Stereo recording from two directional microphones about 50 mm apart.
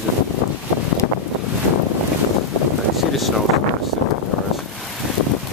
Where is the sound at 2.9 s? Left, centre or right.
Centre.